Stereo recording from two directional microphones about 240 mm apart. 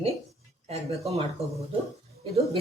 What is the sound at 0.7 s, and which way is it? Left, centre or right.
Speech, right.